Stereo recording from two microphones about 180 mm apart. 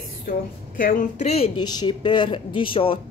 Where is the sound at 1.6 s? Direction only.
25° left (ahead or behind).